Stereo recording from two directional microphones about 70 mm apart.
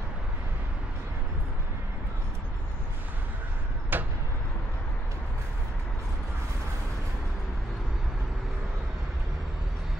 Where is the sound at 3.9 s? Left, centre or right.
Right.